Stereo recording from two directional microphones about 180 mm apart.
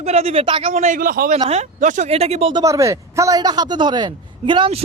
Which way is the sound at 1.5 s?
40° right (ahead or behind).